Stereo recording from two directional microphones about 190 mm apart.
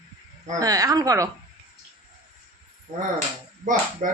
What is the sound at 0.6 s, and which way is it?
Speech, 20° right (ahead or behind).